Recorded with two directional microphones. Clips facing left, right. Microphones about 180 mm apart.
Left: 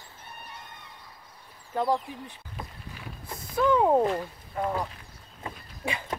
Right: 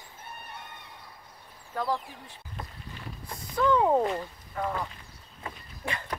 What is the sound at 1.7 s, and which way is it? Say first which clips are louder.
Speech: left 4 dB; 25° left (ahead or behind).